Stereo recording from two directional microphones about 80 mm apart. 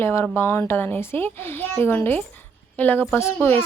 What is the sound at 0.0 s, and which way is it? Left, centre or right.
Speech, left.